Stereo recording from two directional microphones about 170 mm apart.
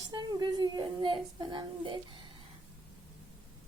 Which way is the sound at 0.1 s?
25° right (ahead or behind).